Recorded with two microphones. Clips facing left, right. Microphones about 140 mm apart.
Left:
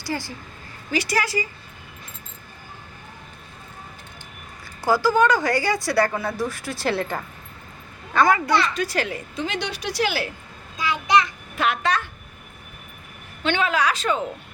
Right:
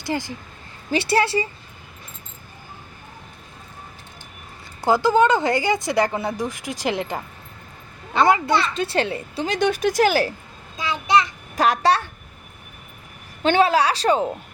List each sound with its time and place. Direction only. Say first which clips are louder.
0.0 s a woman's voice: right 3 dB; 20° right (ahead or behind)
4.9 s a woman's voice: right 2 dB; 20° right (ahead or behind)
9.6 s speech: right 10 dB; 50° right (ahead or behind)
10.8 s child singing: even; 25° right (ahead or behind)
11.5 s a woman's voice: right 5 dB; 40° right (ahead or behind)
13.4 s a woman's voice: right 5 dB; 35° right (ahead or behind)